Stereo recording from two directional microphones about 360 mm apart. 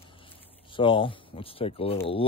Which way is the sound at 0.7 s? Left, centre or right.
Centre.